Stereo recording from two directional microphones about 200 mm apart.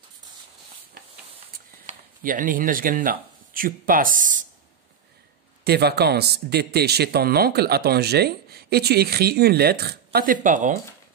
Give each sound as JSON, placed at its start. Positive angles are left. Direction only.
{"t": 1.9, "sound": "speech", "side_deg": -45}
{"t": 5.6, "sound": "speech", "side_deg": -55}